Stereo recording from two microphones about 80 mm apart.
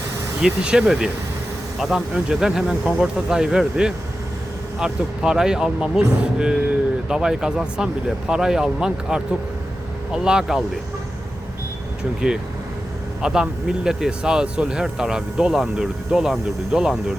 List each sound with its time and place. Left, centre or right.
0.4 s speech: centre
13.2 s speech: centre